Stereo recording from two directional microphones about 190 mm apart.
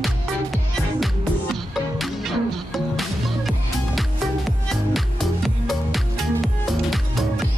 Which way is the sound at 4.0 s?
Centre (ahead or behind).